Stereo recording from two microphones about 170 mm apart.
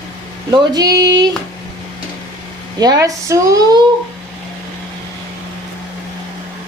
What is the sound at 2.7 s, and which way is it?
A woman's voice, 20° right (ahead or behind).